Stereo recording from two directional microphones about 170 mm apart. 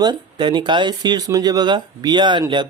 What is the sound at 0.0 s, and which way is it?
Speech, 25° right (ahead or behind).